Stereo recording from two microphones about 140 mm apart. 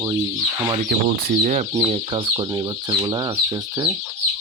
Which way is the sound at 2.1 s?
35° right (ahead or behind).